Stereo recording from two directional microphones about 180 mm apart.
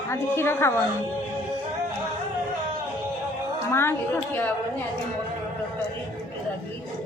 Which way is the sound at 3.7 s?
15° left (ahead or behind).